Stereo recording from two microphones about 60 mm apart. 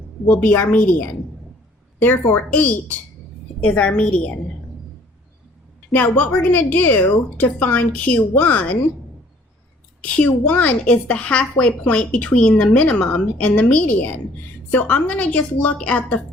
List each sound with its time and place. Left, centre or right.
0.3 s a woman's voice: left
3.6 s a woman's voice: left
5.9 s a woman's voice: left
10.0 s a woman's voice: left